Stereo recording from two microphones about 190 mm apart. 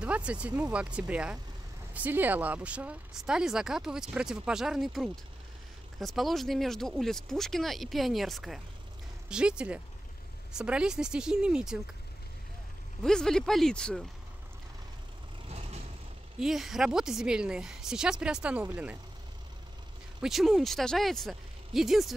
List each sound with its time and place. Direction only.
0.0 s speech: 5° right (ahead or behind)
13.0 s speech: 5° left (ahead or behind)
15.4 s vehicle: 35° right (ahead or behind)
16.3 s speech: centre (ahead or behind)
20.2 s speech: centre (ahead or behind)